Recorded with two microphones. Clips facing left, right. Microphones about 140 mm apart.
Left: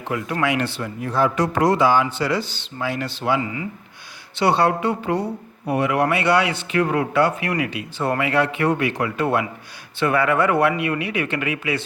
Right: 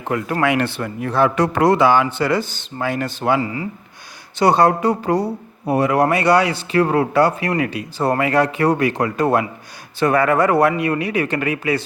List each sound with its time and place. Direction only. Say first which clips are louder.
0.0 s speech: right 4 dB; 45° right (ahead or behind)